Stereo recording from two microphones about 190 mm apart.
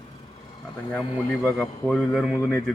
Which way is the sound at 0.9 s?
5° left (ahead or behind).